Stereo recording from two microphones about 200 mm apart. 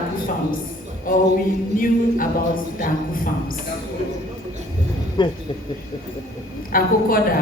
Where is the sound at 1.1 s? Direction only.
45° left (ahead or behind).